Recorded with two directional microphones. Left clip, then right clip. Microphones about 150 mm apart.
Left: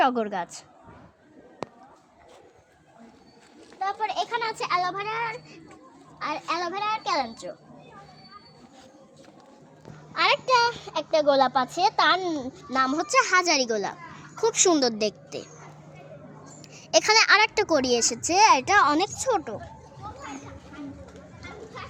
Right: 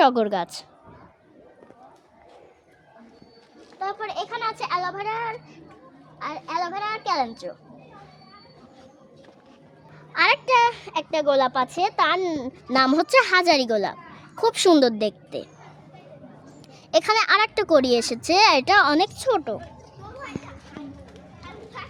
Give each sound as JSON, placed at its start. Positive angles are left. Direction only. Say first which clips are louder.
{"t": 0.0, "sound": "a woman's voice", "louder": "right 5 dB", "side_deg": -55}
{"t": 3.8, "sound": "a child's voice", "louder": "left 1 dB", "side_deg": -10}
{"t": 6.1, "sound": "a child's voice", "louder": "even", "side_deg": -15}
{"t": 6.6, "sound": "a child's voice", "louder": "right 1 dB", "side_deg": -30}
{"t": 10.1, "sound": "a child's voice", "louder": "right 3 dB", "side_deg": -15}
{"t": 12.6, "sound": "a child's voice", "louder": "right 5 dB", "side_deg": -85}
{"t": 16.9, "sound": "a child's voice", "louder": "even", "side_deg": -15}
{"t": 17.7, "sound": "a child's voice", "louder": "right 4 dB", "side_deg": -30}
{"t": 18.3, "sound": "a child's voice", "louder": "right 2 dB", "side_deg": -50}